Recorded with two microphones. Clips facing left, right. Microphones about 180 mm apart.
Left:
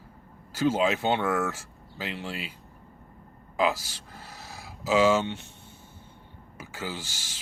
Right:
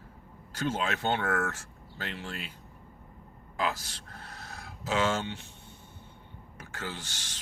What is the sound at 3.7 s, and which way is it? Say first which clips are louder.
Speech: left 1 dB; 5° left (ahead or behind).